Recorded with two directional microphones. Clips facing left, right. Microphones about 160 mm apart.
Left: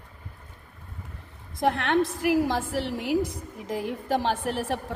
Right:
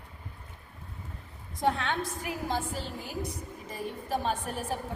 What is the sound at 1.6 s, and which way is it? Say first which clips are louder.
A woman's voice: left 6 dB; 75° left (ahead or behind).